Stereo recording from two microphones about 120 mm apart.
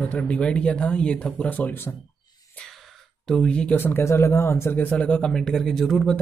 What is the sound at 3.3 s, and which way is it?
Speech, 5° left (ahead or behind).